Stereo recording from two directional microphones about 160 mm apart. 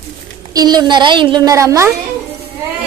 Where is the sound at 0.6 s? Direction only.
25° right (ahead or behind).